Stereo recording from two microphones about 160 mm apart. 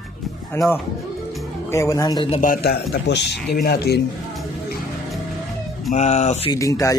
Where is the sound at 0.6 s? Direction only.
15° left (ahead or behind).